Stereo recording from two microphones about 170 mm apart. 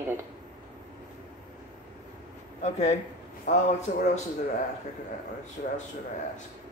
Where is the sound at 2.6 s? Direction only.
40° left (ahead or behind).